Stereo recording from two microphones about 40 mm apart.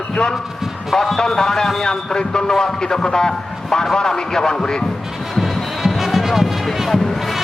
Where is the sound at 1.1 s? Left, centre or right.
Centre.